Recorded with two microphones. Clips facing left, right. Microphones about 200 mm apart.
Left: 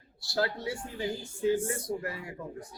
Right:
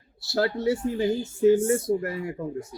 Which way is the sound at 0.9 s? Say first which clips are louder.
Right 9 dB; 45° right (ahead or behind).